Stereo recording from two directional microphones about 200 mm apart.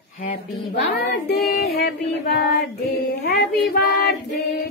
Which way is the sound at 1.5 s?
50° left (ahead or behind).